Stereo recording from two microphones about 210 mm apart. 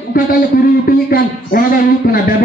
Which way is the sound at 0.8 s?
45° left (ahead or behind).